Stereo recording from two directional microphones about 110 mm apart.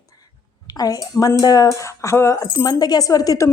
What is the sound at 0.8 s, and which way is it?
A woman's voice, 35° left (ahead or behind).